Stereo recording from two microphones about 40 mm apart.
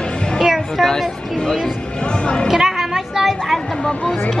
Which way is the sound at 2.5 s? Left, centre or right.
Centre.